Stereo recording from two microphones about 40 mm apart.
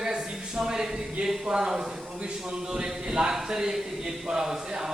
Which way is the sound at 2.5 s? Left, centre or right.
Centre.